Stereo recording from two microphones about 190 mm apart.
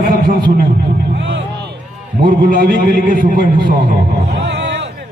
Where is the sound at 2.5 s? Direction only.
50° right (ahead or behind).